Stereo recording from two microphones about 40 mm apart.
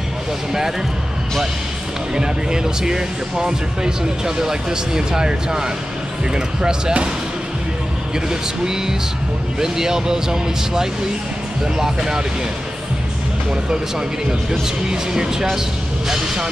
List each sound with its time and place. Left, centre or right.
0.5 s speech: centre
2.1 s speech: centre
8.3 s speech: centre
14.5 s speech: centre